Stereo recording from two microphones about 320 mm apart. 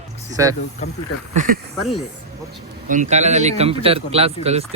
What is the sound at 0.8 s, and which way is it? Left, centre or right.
Speech, left.